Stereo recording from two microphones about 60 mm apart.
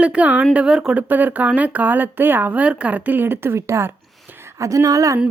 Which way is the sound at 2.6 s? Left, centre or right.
Right.